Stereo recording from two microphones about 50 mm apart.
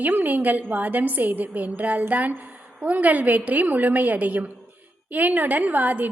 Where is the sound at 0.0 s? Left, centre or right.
Right.